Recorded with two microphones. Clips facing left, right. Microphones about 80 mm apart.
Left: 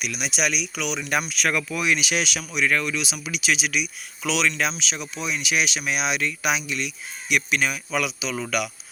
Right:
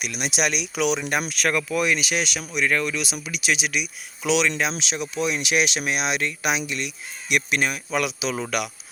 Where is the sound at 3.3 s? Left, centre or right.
Centre.